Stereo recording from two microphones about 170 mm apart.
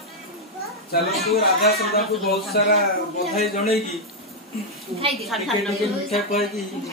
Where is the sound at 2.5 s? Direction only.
65° left (ahead or behind).